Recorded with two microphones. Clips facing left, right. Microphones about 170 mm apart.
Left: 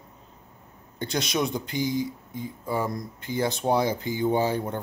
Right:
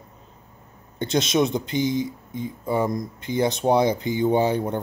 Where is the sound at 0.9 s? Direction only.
20° right (ahead or behind).